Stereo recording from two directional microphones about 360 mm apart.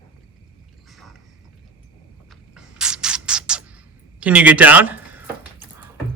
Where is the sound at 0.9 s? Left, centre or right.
Centre.